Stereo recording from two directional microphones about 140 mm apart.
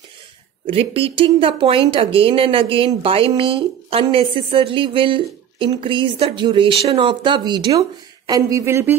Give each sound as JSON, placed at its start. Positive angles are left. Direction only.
{"t": 0.7, "sound": "speech", "side_deg": -40}